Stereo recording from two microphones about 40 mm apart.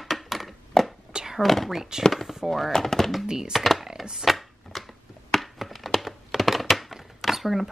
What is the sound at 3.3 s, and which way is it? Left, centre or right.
Speech, centre.